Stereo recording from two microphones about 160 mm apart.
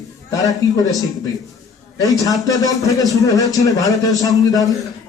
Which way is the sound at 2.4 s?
20° left (ahead or behind).